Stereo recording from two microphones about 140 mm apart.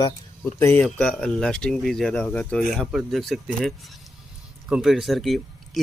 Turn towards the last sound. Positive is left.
turn(degrees=0)  # may be behind; listen again after turning